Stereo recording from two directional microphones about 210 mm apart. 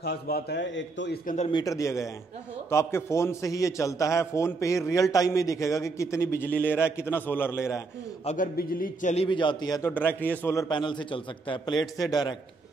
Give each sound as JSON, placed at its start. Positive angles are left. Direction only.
{"t": 0.0, "sound": "a man's voice", "side_deg": 45}
{"t": 1.2, "sound": "a man's voice", "side_deg": 35}
{"t": 1.5, "sound": "a man's voice", "side_deg": 15}
{"t": 8.3, "sound": "a man's voice", "side_deg": 40}
{"t": 9.1, "sound": "a man's voice", "side_deg": 25}